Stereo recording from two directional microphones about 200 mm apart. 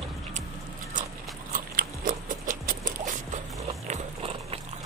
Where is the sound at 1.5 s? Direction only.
45° right (ahead or behind).